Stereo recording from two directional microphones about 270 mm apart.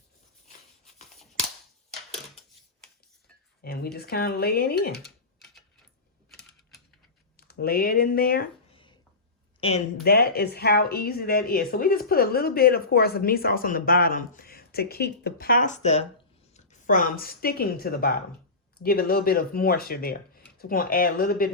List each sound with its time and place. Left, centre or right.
3.6 s speech: left
5.0 s typing: centre
7.3 s speech: left
9.6 s speech: left
10.0 s a woman's voice: left